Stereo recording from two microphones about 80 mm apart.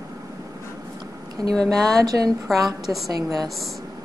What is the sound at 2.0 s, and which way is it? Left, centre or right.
Speech, right.